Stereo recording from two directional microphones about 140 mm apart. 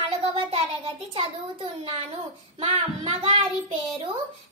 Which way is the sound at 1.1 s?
45° right (ahead or behind).